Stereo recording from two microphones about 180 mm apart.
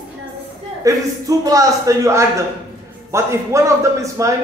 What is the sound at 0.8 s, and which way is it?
A man's voice, 20° right (ahead or behind).